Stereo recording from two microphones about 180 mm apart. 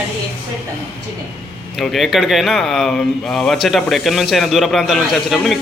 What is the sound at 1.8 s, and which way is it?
Speech, centre (ahead or behind).